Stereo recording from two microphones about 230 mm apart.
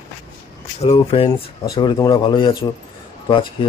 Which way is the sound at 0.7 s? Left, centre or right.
Left.